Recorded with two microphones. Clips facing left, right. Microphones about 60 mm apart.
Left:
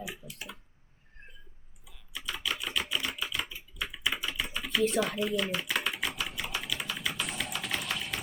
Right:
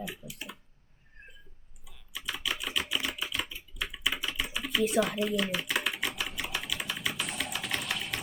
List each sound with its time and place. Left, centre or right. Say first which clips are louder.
0.0 s clicking: right 1 dB; centre
0.3 s clicking: right 1 dB; centre
1.2 s a sound: right 1 dB; centre
1.9 s typewriter: even; centre
3.5 s typing: even; centre